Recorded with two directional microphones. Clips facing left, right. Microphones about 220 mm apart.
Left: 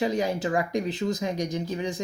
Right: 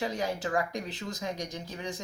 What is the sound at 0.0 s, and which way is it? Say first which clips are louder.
Speech: left 6 dB; 15° left (ahead or behind).